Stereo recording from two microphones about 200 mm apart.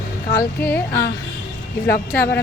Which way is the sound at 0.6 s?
10° left (ahead or behind).